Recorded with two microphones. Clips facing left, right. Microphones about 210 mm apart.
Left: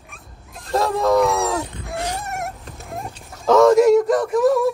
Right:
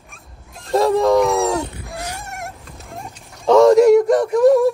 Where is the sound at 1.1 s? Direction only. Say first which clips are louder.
Right 2 dB; centre (ahead or behind).